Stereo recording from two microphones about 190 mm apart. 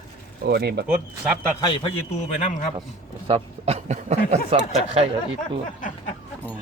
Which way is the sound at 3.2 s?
30° right (ahead or behind).